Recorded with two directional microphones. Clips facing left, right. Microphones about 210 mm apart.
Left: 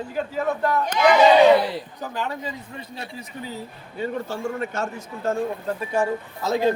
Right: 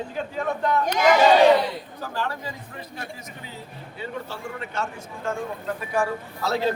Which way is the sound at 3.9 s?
45° left (ahead or behind).